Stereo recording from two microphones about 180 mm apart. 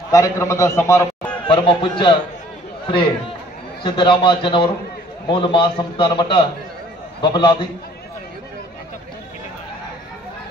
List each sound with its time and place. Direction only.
0.1 s a man's voice: 15° left (ahead or behind)
1.5 s a man's voice: 25° left (ahead or behind)
3.8 s a man's voice: 25° left (ahead or behind)